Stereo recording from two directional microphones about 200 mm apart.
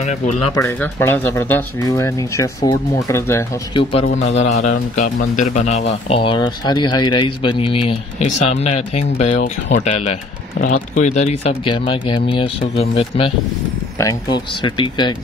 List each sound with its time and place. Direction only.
0.0 s a man's voice: 35° left (ahead or behind)
0.6 s speech: 15° left (ahead or behind)
4.3 s a man's voice: 35° left (ahead or behind)